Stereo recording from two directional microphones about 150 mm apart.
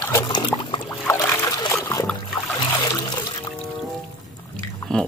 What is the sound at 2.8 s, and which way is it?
Water, 25° left (ahead or behind).